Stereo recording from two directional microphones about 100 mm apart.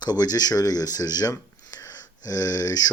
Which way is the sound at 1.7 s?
35° left (ahead or behind).